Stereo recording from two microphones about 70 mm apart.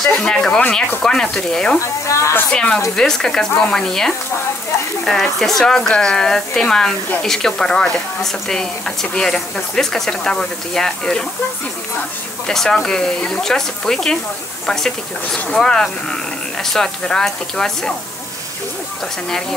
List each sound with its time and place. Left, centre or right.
0.2 s a woman's voice: centre
2.0 s speech: left
2.5 s a woman's voice: centre
12.4 s a woman's voice: centre
15.3 s a woman's voice: centre